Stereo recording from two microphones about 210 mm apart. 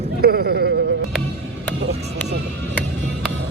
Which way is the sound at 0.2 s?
50° right (ahead or behind).